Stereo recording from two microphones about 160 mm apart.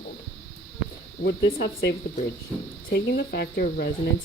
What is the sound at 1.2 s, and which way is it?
Speech, 90° left.